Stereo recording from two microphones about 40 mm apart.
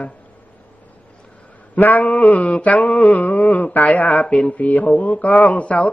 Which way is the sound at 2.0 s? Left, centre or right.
Left.